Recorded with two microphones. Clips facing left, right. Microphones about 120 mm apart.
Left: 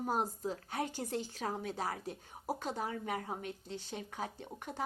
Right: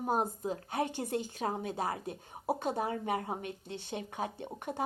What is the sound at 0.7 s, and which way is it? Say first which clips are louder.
Speech: right 6 dB; 60° right (ahead or behind).